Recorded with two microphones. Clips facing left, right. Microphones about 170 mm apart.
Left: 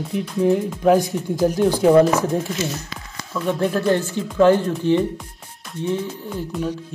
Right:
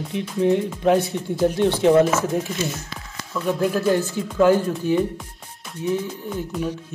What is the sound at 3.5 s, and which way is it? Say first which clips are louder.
Speech: left 1 dB; 5° right (ahead or behind).